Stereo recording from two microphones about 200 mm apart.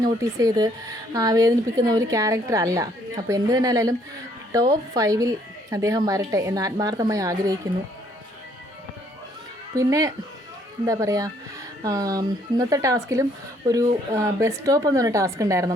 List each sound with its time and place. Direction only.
0.0 s speech: 15° right (ahead or behind)
9.7 s speech: 15° right (ahead or behind)